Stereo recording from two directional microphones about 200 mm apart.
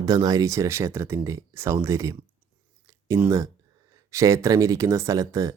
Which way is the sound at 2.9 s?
10° right (ahead or behind).